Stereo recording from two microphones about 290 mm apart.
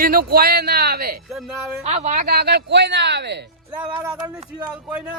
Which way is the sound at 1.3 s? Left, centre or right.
Centre.